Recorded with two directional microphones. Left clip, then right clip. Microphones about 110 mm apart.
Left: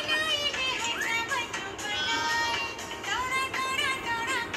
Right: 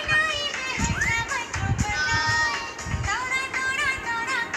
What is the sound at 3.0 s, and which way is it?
Music, 25° left (ahead or behind).